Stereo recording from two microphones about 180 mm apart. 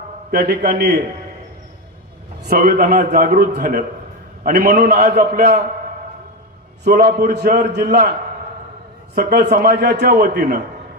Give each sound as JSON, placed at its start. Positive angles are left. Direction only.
{"t": 0.3, "sound": "a man's voice", "side_deg": -55}
{"t": 2.5, "sound": "a man's voice", "side_deg": -55}
{"t": 6.9, "sound": "a man's voice", "side_deg": -55}
{"t": 9.1, "sound": "a man's voice", "side_deg": -55}